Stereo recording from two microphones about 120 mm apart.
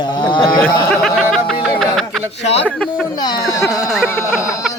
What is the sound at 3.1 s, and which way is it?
Speech, 35° left (ahead or behind).